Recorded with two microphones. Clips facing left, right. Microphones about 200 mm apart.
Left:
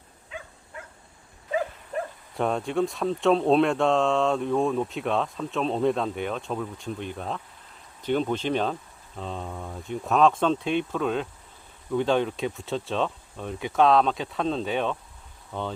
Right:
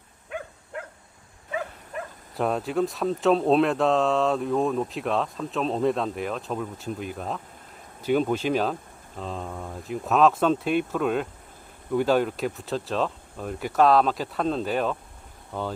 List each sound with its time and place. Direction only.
0.3 s dog: 60° right (ahead or behind)
1.5 s dog: 35° left (ahead or behind)
2.3 s speech: centre (ahead or behind)